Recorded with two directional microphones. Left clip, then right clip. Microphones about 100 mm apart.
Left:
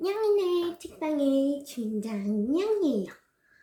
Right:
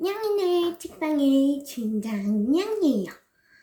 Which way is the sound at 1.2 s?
15° right (ahead or behind).